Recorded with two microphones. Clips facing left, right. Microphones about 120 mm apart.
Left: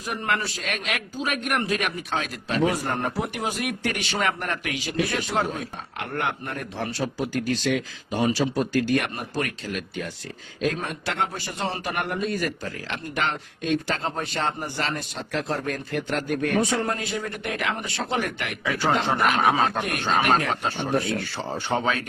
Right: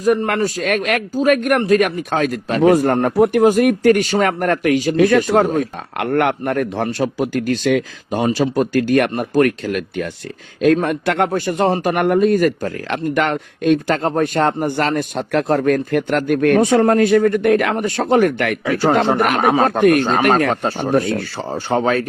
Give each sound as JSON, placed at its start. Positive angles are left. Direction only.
{"t": 0.0, "sound": "a man's voice", "side_deg": -45}
{"t": 6.0, "sound": "a man's voice", "side_deg": -65}
{"t": 21.7, "sound": "speech", "side_deg": -40}